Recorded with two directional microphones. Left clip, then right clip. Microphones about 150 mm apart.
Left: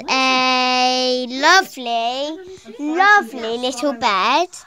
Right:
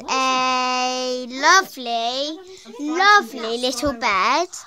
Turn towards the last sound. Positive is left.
turn(degrees=5)  # may be behind; listen again after turning